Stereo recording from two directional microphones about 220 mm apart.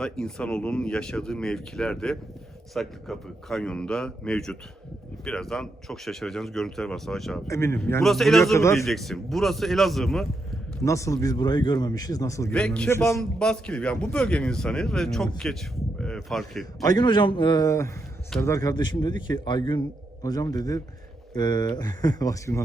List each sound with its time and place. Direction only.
0.0 s speech: 5° left (ahead or behind)
7.4 s speech: 10° left (ahead or behind)
8.5 s speech: 15° left (ahead or behind)
8.8 s speech: centre (ahead or behind)
10.8 s speech: 15° left (ahead or behind)
16.8 s speech: 20° left (ahead or behind)